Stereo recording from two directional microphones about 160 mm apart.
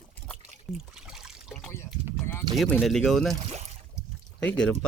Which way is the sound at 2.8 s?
Centre (ahead or behind).